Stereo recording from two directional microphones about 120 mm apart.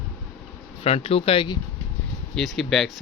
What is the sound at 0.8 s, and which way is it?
Speech, 55° left (ahead or behind).